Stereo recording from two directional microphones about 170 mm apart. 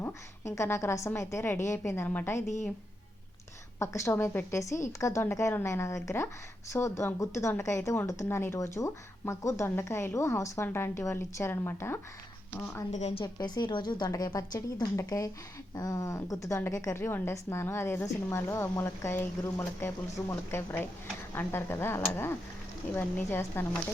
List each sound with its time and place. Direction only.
0.0 s a woman's voice: 15° left (ahead or behind)
3.8 s a woman's voice: 15° left (ahead or behind)
12.9 s a woman's voice: 40° left (ahead or behind)
13.2 s a woman's voice: 25° left (ahead or behind)